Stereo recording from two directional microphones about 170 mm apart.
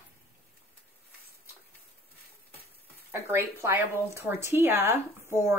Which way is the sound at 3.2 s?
15° right (ahead or behind).